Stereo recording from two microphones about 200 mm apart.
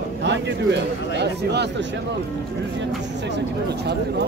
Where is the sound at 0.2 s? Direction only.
60° right (ahead or behind).